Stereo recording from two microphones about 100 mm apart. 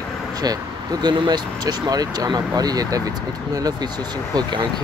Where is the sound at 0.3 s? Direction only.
40° right (ahead or behind).